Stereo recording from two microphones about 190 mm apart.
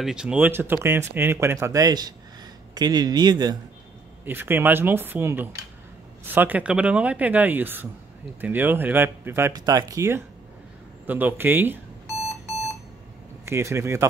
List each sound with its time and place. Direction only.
0.0 s a man's voice: 5° right (ahead or behind); by 3.5 s 20° right (ahead or behind)
4.2 s speech: 10° right (ahead or behind)
13.5 s speech: 15° right (ahead or behind)